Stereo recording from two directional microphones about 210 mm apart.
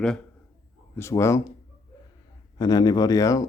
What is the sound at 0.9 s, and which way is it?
Speech, 15° left (ahead or behind).